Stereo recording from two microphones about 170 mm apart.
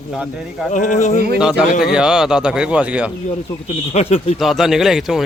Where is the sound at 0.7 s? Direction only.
45° left (ahead or behind).